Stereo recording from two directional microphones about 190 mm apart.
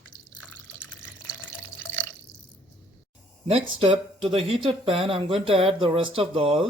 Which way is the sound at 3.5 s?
30° right (ahead or behind).